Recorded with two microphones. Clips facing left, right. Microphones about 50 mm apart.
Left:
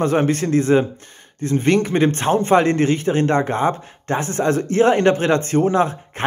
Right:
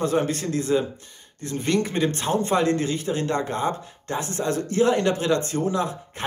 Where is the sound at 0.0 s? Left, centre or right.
Left.